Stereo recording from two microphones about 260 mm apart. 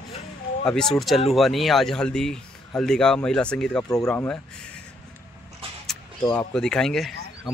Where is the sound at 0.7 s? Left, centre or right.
Centre.